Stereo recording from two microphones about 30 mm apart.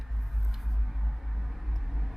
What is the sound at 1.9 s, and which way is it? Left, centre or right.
Vehicle, centre.